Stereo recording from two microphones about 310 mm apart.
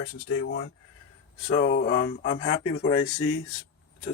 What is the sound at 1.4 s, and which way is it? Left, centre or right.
Speech, left.